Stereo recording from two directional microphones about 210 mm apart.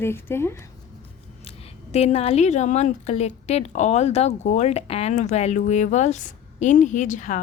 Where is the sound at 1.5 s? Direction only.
30° left (ahead or behind).